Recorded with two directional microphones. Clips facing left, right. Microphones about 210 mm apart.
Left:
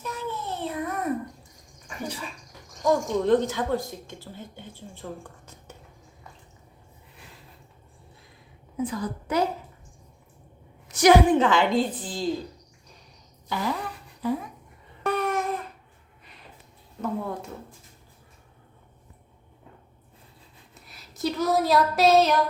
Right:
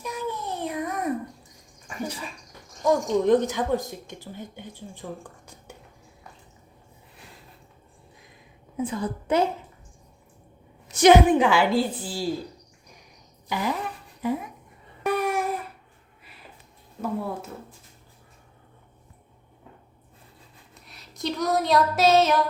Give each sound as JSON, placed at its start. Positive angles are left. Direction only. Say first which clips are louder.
{"t": 0.0, "sound": "a sound", "louder": "right 2 dB", "side_deg": -15}
{"t": 2.8, "sound": "speech", "louder": "right 2 dB", "side_deg": -15}
{"t": 8.8, "sound": "a woman's voice", "louder": "right 1 dB", "side_deg": -25}
{"t": 10.8, "sound": "speech", "louder": "right 1 dB", "side_deg": -25}
{"t": 13.5, "sound": "speech", "louder": "right 1 dB", "side_deg": -15}
{"t": 15.0, "sound": "babbling", "louder": "right 1 dB", "side_deg": -10}
{"t": 17.0, "sound": "speech", "louder": "right 1 dB", "side_deg": -5}
{"t": 20.7, "sound": "speech", "louder": "even", "side_deg": 0}